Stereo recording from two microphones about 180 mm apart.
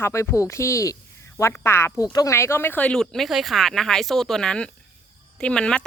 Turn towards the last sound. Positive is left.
turn(degrees=5)  # may be behind; listen again after turning